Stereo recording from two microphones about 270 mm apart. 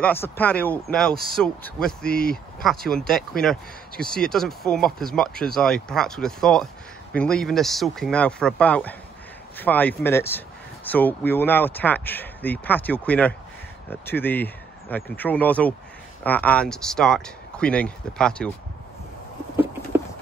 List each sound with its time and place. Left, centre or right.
0.0 s speech: centre